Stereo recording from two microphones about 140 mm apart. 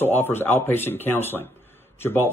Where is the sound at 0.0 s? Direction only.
15° left (ahead or behind).